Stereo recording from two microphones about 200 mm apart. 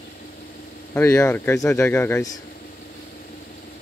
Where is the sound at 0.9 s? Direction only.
15° left (ahead or behind).